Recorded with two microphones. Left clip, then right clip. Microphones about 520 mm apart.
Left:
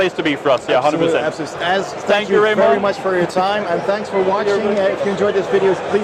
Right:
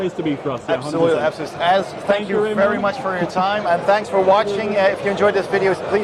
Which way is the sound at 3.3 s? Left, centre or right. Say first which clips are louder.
Left 1 dB; right.